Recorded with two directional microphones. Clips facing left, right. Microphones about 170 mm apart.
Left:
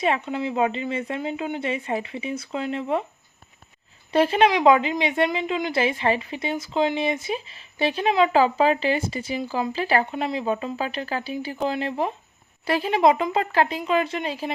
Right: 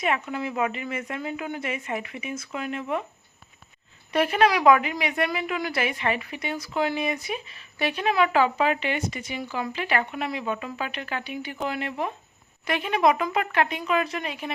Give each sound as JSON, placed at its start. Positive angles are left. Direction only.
{"t": 0.0, "sound": "a woman's voice", "side_deg": 25}
{"t": 4.1, "sound": "a woman's voice", "side_deg": 30}